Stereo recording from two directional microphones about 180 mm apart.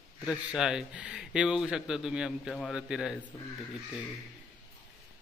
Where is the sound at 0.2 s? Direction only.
5° right (ahead or behind).